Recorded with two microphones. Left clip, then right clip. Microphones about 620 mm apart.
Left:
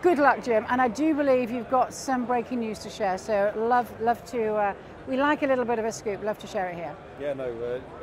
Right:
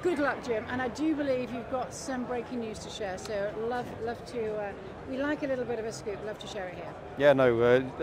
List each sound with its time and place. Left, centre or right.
0.0 s speech: left
7.2 s speech: right